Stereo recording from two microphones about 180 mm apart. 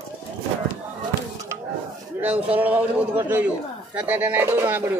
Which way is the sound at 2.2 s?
10° right (ahead or behind).